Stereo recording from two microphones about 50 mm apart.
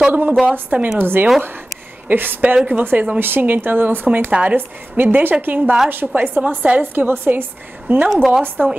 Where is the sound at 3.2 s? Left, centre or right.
Right.